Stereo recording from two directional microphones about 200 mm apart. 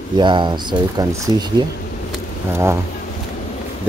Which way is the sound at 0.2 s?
25° right (ahead or behind).